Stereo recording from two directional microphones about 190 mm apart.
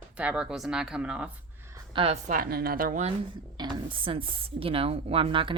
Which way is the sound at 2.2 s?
50° right (ahead or behind).